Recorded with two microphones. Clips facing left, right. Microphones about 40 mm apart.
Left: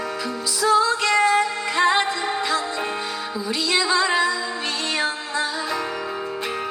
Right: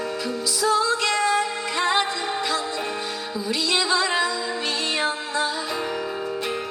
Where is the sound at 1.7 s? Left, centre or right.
Centre.